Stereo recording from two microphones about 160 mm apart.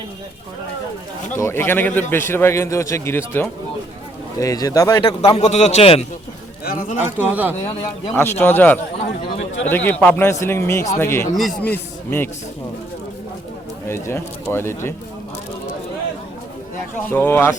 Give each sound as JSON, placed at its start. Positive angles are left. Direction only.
{"t": 1.4, "sound": "a man's voice", "side_deg": 15}
{"t": 6.7, "sound": "a man's voice", "side_deg": 55}
{"t": 7.0, "sound": "speech", "side_deg": -10}
{"t": 8.1, "sound": "a man's voice", "side_deg": 15}
{"t": 13.8, "sound": "a man's voice", "side_deg": 15}
{"t": 17.1, "sound": "a man's voice", "side_deg": 15}